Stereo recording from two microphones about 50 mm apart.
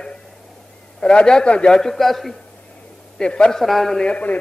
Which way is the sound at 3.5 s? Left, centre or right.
Centre.